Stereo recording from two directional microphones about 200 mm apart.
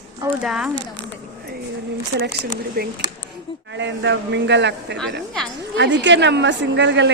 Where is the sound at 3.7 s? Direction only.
65° right (ahead or behind).